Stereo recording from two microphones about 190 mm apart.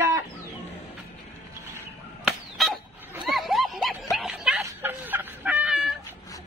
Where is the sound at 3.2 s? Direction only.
Centre (ahead or behind).